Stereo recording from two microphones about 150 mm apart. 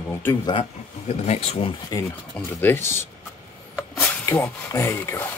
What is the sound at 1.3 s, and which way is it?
Speech, 45° left (ahead or behind).